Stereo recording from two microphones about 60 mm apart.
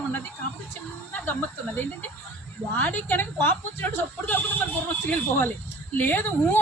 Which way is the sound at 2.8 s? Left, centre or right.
Left.